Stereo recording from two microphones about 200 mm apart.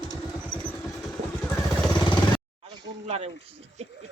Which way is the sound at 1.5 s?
20° left (ahead or behind).